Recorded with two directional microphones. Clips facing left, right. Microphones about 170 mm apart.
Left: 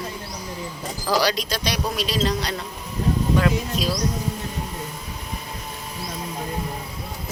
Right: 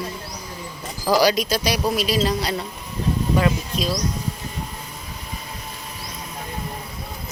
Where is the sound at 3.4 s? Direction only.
Centre (ahead or behind).